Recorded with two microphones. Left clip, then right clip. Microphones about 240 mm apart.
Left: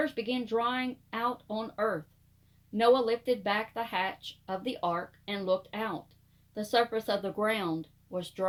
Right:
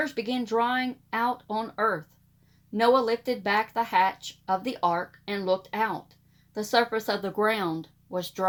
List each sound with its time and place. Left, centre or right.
0.0 s speech: right